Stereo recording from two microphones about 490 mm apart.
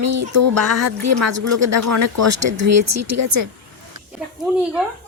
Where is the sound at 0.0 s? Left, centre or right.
Right.